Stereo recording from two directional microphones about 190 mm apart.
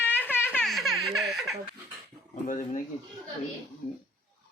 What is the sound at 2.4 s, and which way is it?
Speech, 45° left (ahead or behind).